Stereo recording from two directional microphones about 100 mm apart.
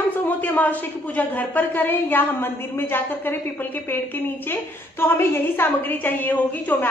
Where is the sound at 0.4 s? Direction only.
15° left (ahead or behind).